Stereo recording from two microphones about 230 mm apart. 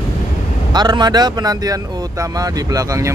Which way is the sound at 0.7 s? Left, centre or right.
Centre.